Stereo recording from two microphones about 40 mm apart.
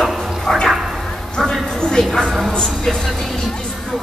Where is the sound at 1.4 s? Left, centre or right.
Centre.